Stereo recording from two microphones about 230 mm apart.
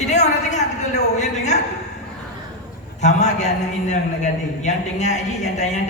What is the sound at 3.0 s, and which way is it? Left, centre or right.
Speech, left.